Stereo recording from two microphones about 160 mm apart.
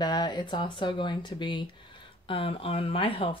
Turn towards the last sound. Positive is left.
turn(degrees=35)  # may be behind; listen again after turning